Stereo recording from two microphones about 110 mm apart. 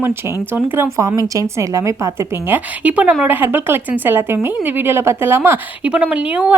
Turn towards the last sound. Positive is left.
turn(degrees=-10)  # may be behind; listen again after turning